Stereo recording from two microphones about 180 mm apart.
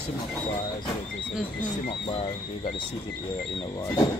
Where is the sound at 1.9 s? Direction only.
35° left (ahead or behind).